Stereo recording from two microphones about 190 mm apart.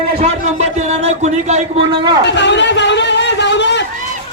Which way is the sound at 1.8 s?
25° right (ahead or behind).